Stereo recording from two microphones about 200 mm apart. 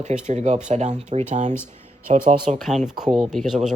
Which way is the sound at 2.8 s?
5° right (ahead or behind).